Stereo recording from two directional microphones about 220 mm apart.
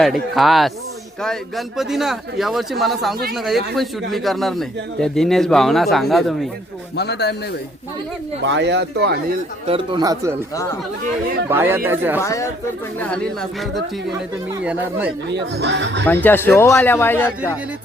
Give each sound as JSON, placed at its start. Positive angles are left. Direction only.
{"t": 0.0, "sound": "a man's voice", "side_deg": 0}
{"t": 6.9, "sound": "a man's voice", "side_deg": 50}
{"t": 8.4, "sound": "speech", "side_deg": -55}
{"t": 9.6, "sound": "speech", "side_deg": -20}
{"t": 10.5, "sound": "speech", "side_deg": 15}
{"t": 11.4, "sound": "speech", "side_deg": -10}
{"t": 12.2, "sound": "speech", "side_deg": 15}
{"t": 13.0, "sound": "a man's voice", "side_deg": 5}
{"t": 15.3, "sound": "speech", "side_deg": -50}
{"t": 16.0, "sound": "speech", "side_deg": 10}